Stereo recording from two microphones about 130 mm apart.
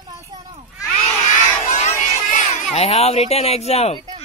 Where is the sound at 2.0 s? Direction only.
65° left (ahead or behind).